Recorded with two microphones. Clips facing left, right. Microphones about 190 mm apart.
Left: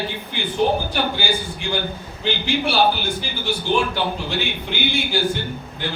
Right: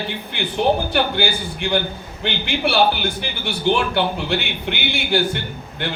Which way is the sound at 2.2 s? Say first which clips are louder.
Even; 60° right (ahead or behind).